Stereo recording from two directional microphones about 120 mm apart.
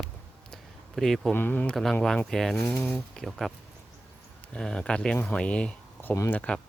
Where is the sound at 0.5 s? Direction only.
5° left (ahead or behind).